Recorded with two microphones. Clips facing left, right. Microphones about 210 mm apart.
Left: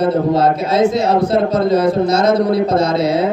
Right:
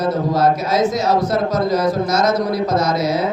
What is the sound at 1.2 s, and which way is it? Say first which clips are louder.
A man's voice: left 4 dB; 30° left (ahead or behind).